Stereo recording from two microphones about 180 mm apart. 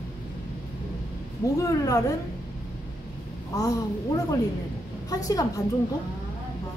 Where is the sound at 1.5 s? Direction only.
20° left (ahead or behind).